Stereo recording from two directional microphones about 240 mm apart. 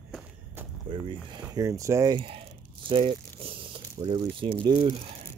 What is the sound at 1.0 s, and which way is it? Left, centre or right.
Speech, centre.